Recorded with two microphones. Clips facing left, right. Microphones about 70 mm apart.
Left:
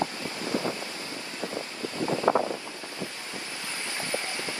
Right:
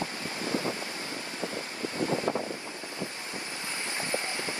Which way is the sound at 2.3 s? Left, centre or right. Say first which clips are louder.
Left 7 dB; left.